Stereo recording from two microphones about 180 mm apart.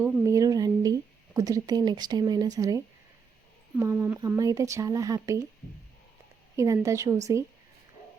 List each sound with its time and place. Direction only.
0.0 s a sound: 15° right (ahead or behind)
3.8 s speech: 15° right (ahead or behind)
6.6 s speech: 15° right (ahead or behind)